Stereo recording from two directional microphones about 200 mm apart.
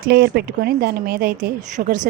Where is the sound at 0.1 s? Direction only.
55° right (ahead or behind).